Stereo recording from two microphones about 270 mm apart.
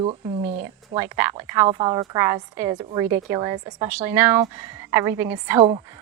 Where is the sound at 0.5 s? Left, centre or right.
Centre.